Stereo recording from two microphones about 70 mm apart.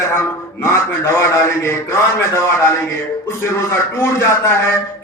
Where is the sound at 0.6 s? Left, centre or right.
Left.